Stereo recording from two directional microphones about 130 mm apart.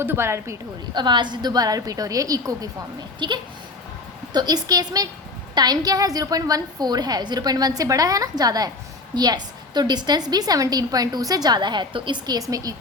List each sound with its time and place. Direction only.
0.0 s a woman's voice: 15° right (ahead or behind)
0.9 s a woman's voice: 35° right (ahead or behind)